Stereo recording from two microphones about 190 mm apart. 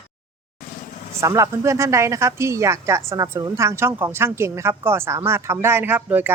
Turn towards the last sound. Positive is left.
turn(degrees=-10)  # may be behind; listen again after turning